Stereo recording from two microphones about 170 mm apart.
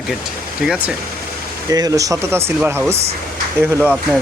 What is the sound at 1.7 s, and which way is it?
Speech, 20° right (ahead or behind).